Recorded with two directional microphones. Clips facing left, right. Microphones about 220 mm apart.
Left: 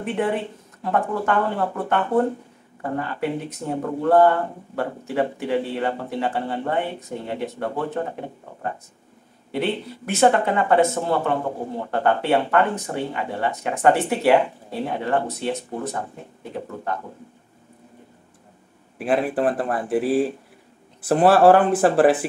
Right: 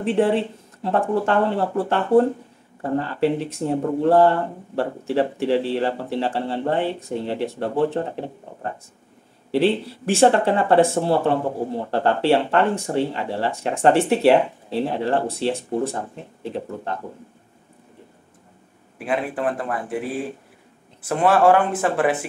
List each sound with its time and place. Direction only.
0.0 s speech: 30° right (ahead or behind)
9.5 s speech: 30° right (ahead or behind)
19.0 s speech: 35° left (ahead or behind)